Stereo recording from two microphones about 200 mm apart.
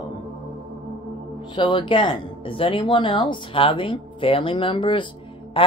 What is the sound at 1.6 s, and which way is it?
Speech, 25° left (ahead or behind).